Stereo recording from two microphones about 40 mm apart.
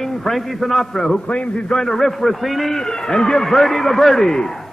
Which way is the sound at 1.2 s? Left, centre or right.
Left.